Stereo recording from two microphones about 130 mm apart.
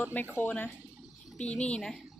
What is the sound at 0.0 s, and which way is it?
A child's voice, 15° left (ahead or behind).